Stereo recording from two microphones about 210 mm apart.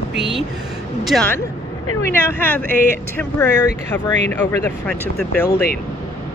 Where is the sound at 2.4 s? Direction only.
10° left (ahead or behind).